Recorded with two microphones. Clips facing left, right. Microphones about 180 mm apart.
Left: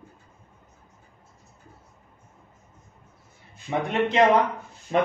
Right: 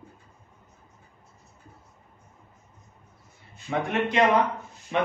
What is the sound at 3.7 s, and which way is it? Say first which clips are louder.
Speech: left 2 dB; 20° left (ahead or behind).